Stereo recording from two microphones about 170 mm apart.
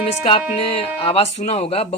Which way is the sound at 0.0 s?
35° left (ahead or behind).